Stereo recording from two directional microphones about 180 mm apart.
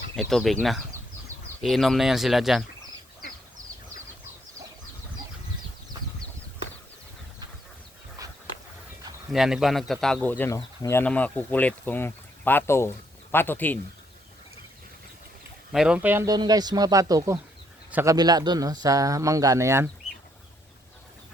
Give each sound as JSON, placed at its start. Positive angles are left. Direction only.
{"t": 0.2, "sound": "speech", "side_deg": 0}
{"t": 1.6, "sound": "speech", "side_deg": 0}
{"t": 8.2, "sound": "dog", "side_deg": -20}
{"t": 9.3, "sound": "speech", "side_deg": 0}
{"t": 15.7, "sound": "speech", "side_deg": -5}